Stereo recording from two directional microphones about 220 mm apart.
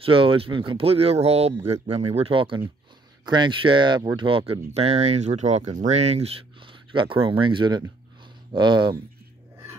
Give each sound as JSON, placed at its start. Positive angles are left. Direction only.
{"t": 0.0, "sound": "speech", "side_deg": -25}